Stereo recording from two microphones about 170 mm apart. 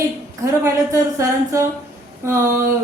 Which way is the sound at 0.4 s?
15° right (ahead or behind).